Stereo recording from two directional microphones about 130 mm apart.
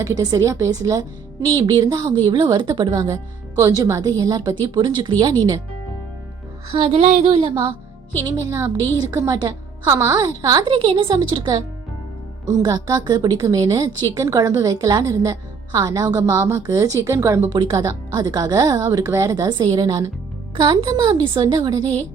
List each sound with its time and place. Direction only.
0.0 s a woman's voice: 30° right (ahead or behind)
6.7 s music: 50° right (ahead or behind)
7.3 s music: 45° right (ahead or behind)
9.0 s a woman's voice: 25° right (ahead or behind)